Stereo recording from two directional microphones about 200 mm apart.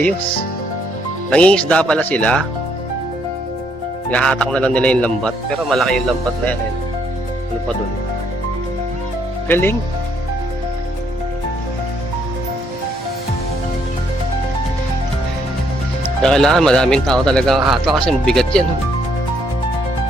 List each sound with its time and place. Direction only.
1.3 s speech: 5° left (ahead or behind)
4.1 s speech: 5° left (ahead or behind)
9.5 s speech: 10° left (ahead or behind)
16.2 s speech: centre (ahead or behind)